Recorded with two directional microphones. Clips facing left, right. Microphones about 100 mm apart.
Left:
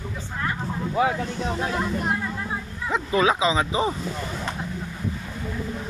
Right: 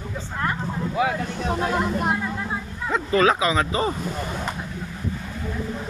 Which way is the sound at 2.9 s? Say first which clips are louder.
Right 2 dB; 10° left (ahead or behind).